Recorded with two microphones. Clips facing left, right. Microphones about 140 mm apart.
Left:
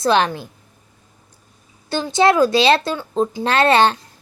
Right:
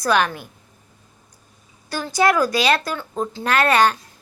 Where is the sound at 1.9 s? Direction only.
25° left (ahead or behind).